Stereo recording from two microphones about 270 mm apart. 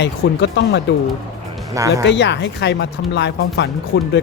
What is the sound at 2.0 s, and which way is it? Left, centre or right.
Speech, left.